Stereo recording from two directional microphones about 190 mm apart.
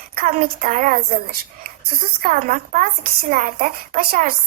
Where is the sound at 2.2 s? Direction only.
45° right (ahead or behind).